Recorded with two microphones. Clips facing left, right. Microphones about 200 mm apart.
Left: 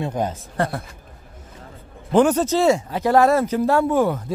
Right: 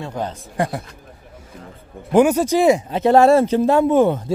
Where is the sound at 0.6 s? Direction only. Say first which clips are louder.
Right 1 dB; 15° right (ahead or behind).